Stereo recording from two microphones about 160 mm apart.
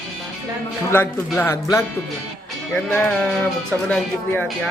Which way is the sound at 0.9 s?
10° left (ahead or behind).